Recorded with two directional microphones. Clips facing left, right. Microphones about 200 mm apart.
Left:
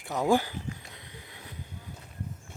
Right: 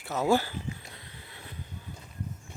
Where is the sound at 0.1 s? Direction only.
15° left (ahead or behind).